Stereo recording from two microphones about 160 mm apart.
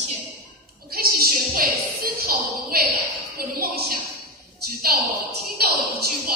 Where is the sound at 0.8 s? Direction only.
70° right (ahead or behind).